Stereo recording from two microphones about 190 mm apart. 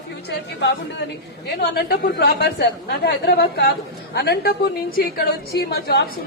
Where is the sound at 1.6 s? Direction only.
55° left (ahead or behind).